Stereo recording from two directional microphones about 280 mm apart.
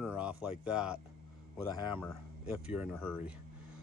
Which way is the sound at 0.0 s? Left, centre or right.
Centre.